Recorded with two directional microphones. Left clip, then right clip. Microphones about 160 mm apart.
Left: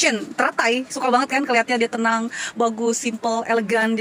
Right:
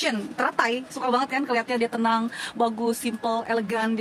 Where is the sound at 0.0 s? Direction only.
20° left (ahead or behind).